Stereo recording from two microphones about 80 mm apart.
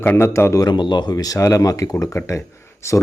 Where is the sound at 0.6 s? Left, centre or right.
Left.